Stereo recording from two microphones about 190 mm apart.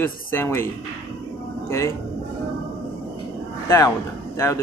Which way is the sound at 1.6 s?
15° left (ahead or behind).